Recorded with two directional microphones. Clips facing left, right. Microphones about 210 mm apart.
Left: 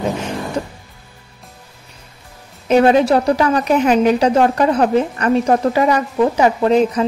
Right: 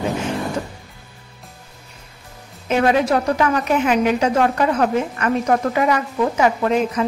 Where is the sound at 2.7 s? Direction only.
35° left (ahead or behind).